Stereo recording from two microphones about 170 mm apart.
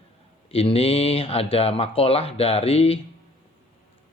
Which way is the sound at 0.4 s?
35° left (ahead or behind).